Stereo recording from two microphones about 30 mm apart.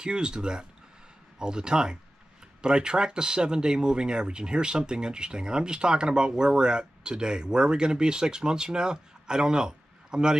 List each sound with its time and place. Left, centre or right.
0.0 s speech: right